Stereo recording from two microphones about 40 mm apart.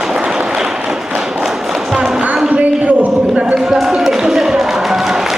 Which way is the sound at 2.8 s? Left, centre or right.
Right.